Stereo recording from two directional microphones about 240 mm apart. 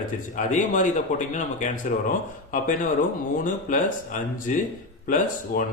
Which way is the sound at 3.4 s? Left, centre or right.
Left.